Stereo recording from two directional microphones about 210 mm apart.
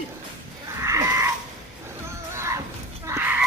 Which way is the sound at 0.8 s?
15° right (ahead or behind).